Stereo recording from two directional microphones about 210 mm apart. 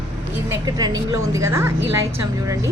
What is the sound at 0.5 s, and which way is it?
A woman's voice, 20° right (ahead or behind).